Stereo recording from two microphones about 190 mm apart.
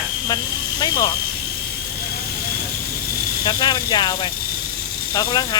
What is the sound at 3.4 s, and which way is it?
Speech, 25° left (ahead or behind).